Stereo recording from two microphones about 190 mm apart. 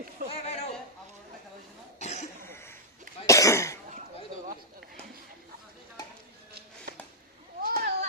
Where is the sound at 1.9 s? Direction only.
35° left (ahead or behind).